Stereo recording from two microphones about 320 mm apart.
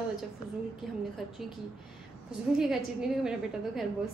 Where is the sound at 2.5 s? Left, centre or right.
Centre.